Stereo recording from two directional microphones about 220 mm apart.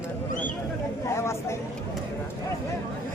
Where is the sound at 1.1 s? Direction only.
10° left (ahead or behind).